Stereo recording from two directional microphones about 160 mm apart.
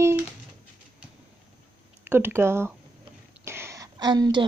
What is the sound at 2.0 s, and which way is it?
A woman's voice, 15° right (ahead or behind).